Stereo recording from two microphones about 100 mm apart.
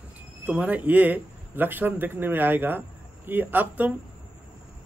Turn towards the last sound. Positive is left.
turn(degrees=-15)  # may be behind; listen again after turning